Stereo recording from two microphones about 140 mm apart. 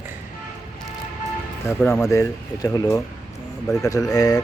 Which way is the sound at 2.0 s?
20° left (ahead or behind).